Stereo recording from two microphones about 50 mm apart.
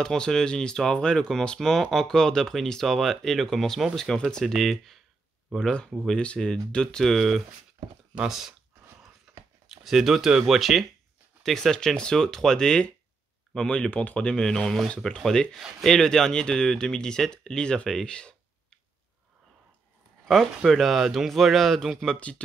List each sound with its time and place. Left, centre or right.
0.0 s speech: centre
1.6 s speech: centre
6.0 s speech: centre
9.7 s speech: centre
11.4 s speech: centre
17.8 s a sound: centre
20.2 s speech: centre